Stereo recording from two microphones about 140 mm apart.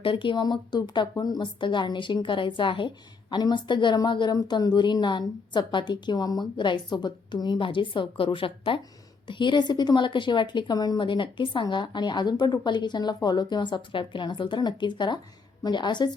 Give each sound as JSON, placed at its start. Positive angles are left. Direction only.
{"t": 0.0, "sound": "speech", "side_deg": 35}